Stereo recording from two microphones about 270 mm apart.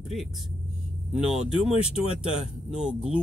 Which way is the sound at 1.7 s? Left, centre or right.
Left.